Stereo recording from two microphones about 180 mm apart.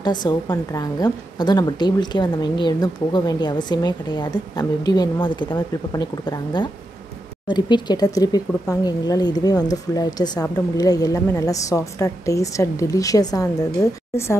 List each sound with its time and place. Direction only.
0.0 s a woman's voice: 25° left (ahead or behind)